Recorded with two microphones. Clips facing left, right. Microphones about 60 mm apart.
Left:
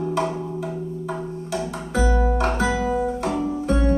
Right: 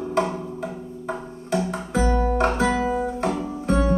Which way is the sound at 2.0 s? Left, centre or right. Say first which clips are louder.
Even; right.